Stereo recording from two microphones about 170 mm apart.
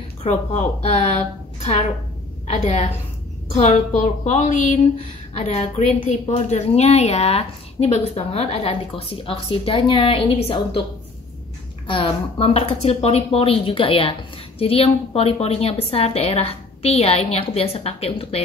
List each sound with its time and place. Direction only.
0.2 s a woman's voice: 45° left (ahead or behind)
11.9 s a woman's voice: 35° left (ahead or behind)